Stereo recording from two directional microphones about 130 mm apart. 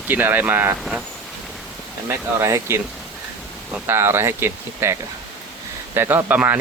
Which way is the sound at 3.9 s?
20° right (ahead or behind).